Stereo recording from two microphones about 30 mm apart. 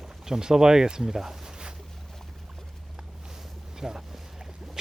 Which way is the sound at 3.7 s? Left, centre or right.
Centre.